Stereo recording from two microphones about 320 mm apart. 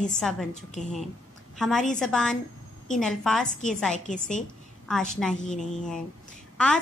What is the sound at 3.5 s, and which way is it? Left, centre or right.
Speech, left.